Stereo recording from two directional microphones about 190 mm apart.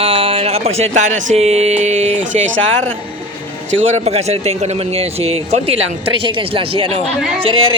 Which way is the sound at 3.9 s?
35° right (ahead or behind).